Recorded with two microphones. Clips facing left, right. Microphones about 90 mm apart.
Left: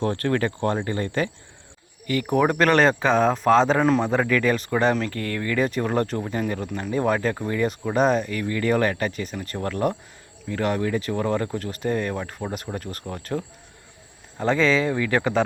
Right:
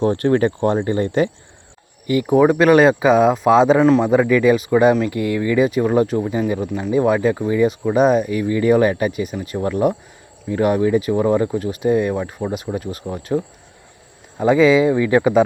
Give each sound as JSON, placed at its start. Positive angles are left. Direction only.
{"t": 0.0, "sound": "a man's voice", "side_deg": -20}
{"t": 2.4, "sound": "a man's voice", "side_deg": -5}